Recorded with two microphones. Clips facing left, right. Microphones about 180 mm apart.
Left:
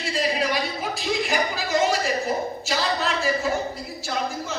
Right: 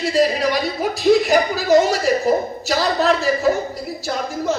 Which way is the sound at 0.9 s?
40° right (ahead or behind).